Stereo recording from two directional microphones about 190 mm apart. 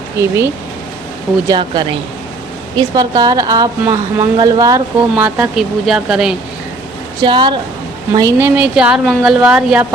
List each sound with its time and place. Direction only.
0.2 s a woman's voice: 15° right (ahead or behind)
1.5 s a woman's voice: 25° right (ahead or behind)
5.1 s speech: 5° right (ahead or behind)
7.2 s a woman's voice: 25° right (ahead or behind); by 9.8 s 5° right (ahead or behind)